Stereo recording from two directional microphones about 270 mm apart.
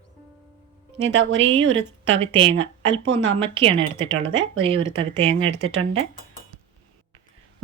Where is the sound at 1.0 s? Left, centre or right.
Right.